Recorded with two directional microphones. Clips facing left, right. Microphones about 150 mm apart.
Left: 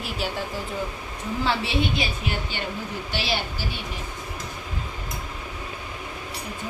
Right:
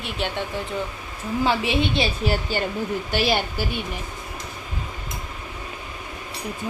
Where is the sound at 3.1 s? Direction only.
50° right (ahead or behind).